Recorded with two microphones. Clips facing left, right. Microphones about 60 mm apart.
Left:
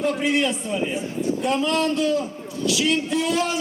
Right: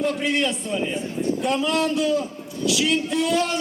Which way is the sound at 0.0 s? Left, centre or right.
Centre.